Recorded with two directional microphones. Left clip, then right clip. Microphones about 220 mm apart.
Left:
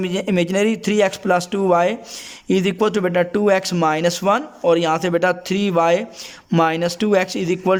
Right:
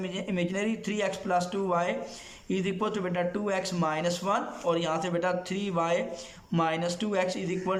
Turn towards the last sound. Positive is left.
turn(degrees=50)  # may be behind; listen again after turning